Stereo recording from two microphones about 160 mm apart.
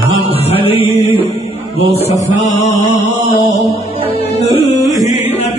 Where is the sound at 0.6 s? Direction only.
35° left (ahead or behind).